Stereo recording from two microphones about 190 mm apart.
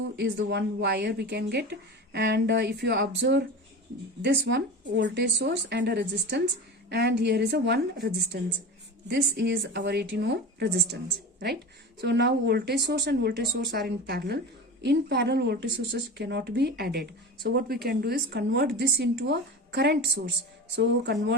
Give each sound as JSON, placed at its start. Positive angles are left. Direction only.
{"t": 0.2, "sound": "speech", "side_deg": -65}
{"t": 11.9, "sound": "speech", "side_deg": -60}